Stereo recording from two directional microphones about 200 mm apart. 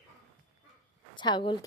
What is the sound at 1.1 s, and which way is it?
Speech, 20° left (ahead or behind).